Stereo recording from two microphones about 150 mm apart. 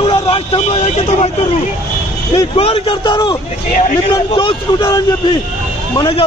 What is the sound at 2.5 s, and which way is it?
A man's voice, 40° left (ahead or behind).